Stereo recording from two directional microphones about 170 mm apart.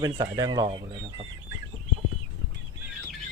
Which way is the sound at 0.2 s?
20° right (ahead or behind).